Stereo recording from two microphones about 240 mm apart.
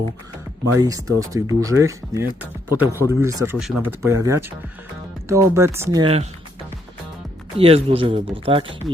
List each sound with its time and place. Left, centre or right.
0.8 s speech: centre
7.6 s speech: right